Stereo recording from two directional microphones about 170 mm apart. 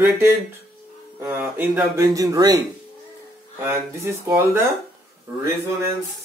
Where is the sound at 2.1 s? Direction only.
20° right (ahead or behind).